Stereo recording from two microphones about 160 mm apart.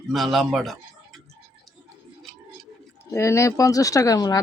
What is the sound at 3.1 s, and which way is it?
Speech, 15° left (ahead or behind).